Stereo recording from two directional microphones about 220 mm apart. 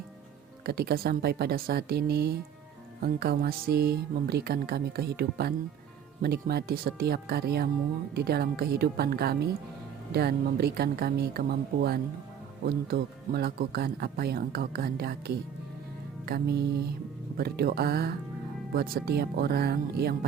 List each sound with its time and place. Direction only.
0.6 s speech: 45° right (ahead or behind)
16.2 s speech: 45° right (ahead or behind)